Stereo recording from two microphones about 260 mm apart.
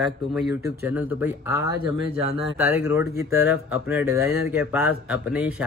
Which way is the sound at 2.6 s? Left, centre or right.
Centre.